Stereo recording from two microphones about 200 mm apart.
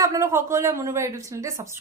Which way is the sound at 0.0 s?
15° right (ahead or behind).